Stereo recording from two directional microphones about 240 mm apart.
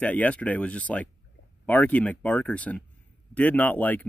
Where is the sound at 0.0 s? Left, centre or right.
Centre.